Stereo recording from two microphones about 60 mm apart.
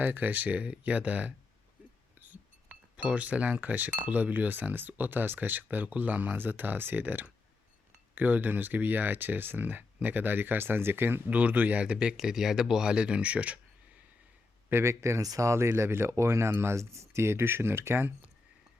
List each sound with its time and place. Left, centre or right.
0.0 s speech: right
3.0 s speech: right
11.3 s speech: right
14.7 s speech: right